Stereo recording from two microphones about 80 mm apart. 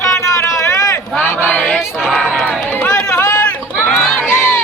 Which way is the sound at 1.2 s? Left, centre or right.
Left.